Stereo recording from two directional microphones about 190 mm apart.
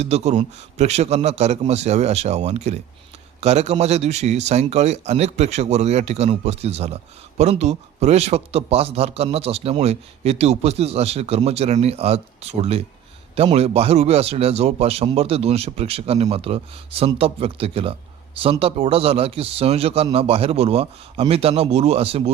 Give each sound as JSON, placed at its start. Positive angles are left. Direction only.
{"t": 0.0, "sound": "speech", "side_deg": -35}